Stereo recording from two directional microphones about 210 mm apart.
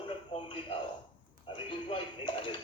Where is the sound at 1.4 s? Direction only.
25° left (ahead or behind).